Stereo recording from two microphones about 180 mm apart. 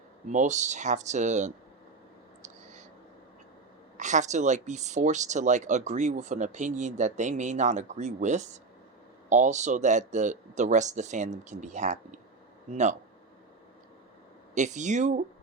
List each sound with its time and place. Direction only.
0.3 s speech: 40° right (ahead or behind)
3.9 s speech: 40° right (ahead or behind)
14.5 s speech: 40° right (ahead or behind)